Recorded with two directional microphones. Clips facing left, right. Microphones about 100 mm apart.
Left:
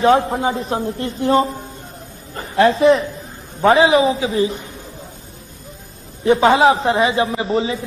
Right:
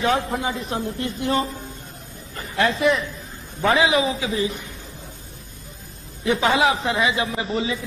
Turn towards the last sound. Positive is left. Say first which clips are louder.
# left 5 dB
turn(degrees=35)  # may be behind; listen again after turning